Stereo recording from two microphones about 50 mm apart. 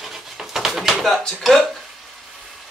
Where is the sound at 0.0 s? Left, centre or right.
Centre.